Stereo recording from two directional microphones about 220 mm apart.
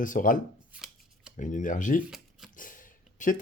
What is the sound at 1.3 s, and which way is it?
Speech, 35° left (ahead or behind).